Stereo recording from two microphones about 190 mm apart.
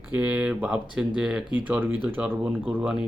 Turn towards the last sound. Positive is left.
turn(degrees=-5)  # may be behind; listen again after turning